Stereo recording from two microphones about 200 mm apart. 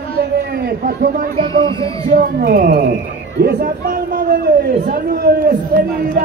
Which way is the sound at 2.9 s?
60° right (ahead or behind).